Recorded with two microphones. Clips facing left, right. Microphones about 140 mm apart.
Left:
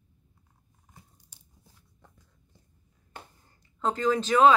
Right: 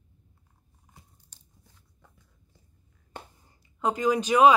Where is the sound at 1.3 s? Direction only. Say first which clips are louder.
Left 1 dB; 10° left (ahead or behind).